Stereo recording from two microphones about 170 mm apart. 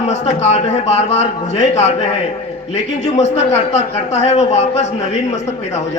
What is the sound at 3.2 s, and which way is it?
A man's voice, 40° left (ahead or behind).